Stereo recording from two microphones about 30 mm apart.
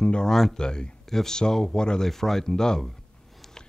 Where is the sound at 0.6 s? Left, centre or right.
Left.